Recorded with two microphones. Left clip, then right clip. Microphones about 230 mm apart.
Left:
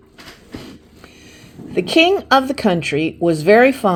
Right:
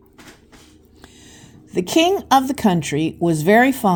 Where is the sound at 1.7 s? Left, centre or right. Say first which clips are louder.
Left 3 dB; right.